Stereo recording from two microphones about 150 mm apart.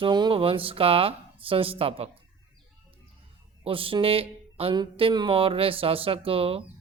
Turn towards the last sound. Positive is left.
turn(degrees=-40)  # may be behind; listen again after turning